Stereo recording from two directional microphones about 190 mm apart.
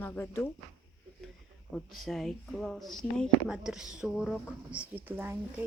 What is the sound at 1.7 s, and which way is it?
Speech, centre (ahead or behind).